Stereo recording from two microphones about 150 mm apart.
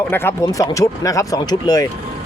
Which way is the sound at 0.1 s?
15° left (ahead or behind).